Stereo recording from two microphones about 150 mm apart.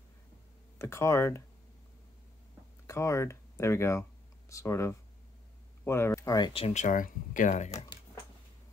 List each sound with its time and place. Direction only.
0.7 s speech: 20° left (ahead or behind)
2.9 s speech: 20° left (ahead or behind)
6.5 s speech: 45° left (ahead or behind)